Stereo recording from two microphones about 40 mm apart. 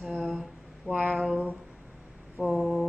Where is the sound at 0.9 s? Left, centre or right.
Centre.